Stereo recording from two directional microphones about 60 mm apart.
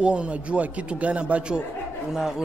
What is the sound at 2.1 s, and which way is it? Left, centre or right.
Speech, centre.